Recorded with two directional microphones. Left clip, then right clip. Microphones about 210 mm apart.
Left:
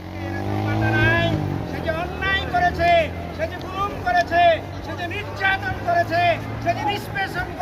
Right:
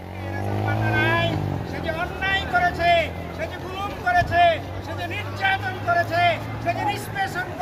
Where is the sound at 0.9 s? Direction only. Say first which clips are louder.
Left 2 dB; centre (ahead or behind).